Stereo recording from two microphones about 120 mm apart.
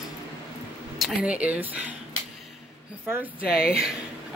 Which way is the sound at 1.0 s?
5° right (ahead or behind).